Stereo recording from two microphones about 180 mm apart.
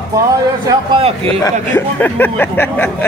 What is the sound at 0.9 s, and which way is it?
Speech, 30° right (ahead or behind).